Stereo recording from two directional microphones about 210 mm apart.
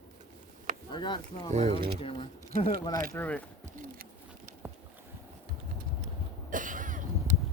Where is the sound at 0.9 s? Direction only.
20° left (ahead or behind).